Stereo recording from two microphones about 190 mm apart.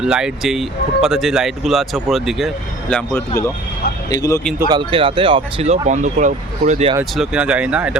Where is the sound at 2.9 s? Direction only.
10° left (ahead or behind).